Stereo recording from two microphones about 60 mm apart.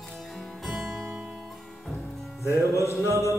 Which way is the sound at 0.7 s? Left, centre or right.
Centre.